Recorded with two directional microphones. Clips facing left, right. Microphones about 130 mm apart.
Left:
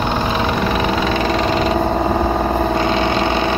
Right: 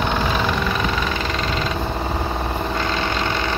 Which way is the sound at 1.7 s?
50° left (ahead or behind).